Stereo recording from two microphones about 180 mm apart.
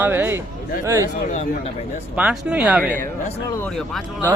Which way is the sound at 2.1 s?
5° right (ahead or behind).